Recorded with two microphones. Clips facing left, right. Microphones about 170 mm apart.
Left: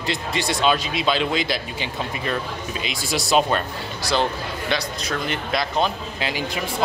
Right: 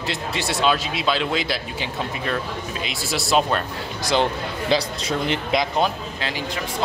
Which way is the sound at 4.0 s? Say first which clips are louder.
Right 2 dB; 20° right (ahead or behind).